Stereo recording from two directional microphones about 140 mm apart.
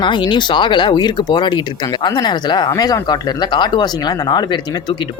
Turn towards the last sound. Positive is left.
turn(degrees=30)  # may be behind; listen again after turning